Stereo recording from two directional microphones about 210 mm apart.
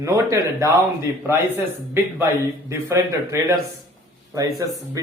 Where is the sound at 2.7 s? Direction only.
10° right (ahead or behind).